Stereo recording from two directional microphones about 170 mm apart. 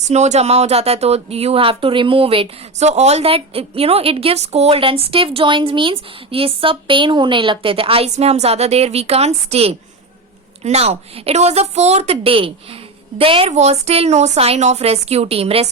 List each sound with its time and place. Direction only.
0.0 s speech: 40° right (ahead or behind)